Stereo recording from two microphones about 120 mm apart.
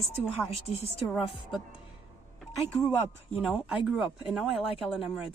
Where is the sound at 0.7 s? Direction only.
60° left (ahead or behind).